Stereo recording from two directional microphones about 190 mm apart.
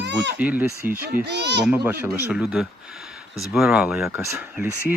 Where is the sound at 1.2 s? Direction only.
65° right (ahead or behind).